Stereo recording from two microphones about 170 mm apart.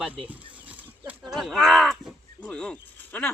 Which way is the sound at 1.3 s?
Centre (ahead or behind).